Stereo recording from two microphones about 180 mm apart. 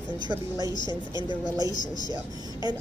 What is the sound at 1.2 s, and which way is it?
Speech, 20° right (ahead or behind).